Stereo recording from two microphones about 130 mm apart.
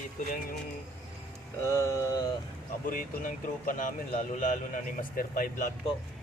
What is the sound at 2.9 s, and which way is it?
Speech, 90° left.